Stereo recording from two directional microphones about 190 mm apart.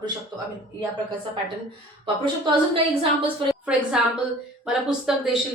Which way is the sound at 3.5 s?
5° right (ahead or behind).